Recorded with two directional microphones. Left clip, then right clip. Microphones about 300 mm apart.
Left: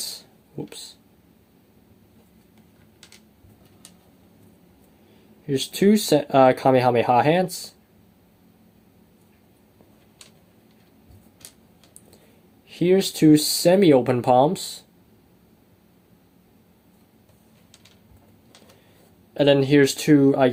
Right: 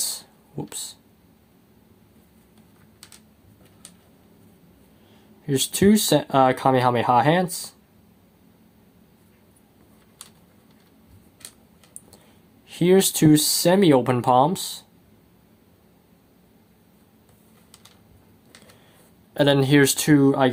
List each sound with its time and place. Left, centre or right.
0.0 s a sound: centre
5.5 s speech: centre
13.0 s speech: centre
19.4 s speech: centre